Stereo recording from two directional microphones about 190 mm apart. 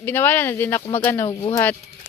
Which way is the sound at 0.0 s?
10° left (ahead or behind).